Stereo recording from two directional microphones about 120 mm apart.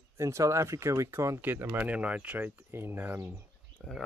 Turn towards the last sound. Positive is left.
turn(degrees=5)  # may be behind; listen again after turning